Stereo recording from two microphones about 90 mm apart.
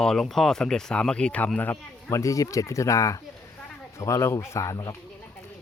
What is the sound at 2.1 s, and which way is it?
Speech, 40° left (ahead or behind).